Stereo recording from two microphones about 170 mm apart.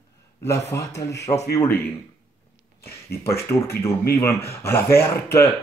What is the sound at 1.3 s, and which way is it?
Speech, 35° left (ahead or behind).